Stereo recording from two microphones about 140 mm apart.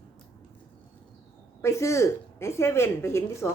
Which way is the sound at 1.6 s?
20° left (ahead or behind).